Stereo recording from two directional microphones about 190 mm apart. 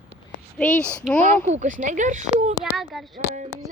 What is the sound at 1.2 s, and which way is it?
Speech, 35° right (ahead or behind).